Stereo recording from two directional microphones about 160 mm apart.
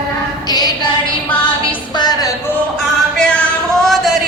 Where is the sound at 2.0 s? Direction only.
25° left (ahead or behind).